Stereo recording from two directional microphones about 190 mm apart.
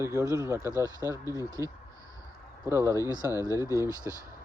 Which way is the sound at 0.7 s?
15° left (ahead or behind).